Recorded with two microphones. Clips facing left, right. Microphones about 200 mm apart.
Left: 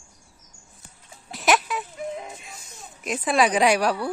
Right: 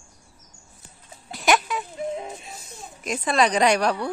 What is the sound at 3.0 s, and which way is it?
A woman's voice, 5° left (ahead or behind).